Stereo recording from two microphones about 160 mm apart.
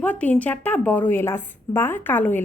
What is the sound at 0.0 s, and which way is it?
A woman's voice, 10° left (ahead or behind).